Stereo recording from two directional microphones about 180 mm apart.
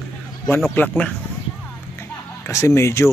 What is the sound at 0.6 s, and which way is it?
Speech, 10° left (ahead or behind).